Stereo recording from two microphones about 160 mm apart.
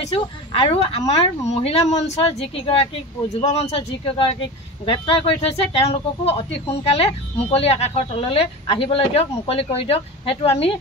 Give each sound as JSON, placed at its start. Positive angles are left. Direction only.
{"t": 0.1, "sound": "speech", "side_deg": 35}